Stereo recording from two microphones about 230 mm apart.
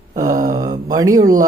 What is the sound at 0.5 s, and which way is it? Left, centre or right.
Speech, centre.